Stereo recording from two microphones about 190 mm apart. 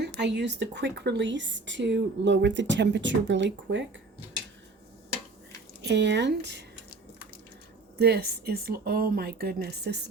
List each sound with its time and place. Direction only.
0.2 s speech: 65° right (ahead or behind)
5.8 s speech: 65° right (ahead or behind)
7.9 s speech: 55° right (ahead or behind)